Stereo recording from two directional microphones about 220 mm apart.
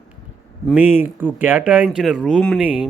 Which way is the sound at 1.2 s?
10° right (ahead or behind).